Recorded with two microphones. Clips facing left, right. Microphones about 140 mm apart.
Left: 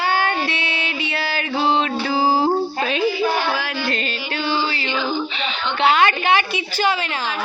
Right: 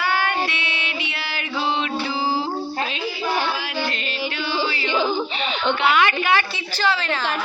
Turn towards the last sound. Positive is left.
turn(degrees=30)  # may be behind; listen again after turning